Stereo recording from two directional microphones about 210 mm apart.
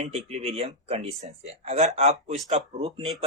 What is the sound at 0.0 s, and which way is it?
Speech, 30° right (ahead or behind).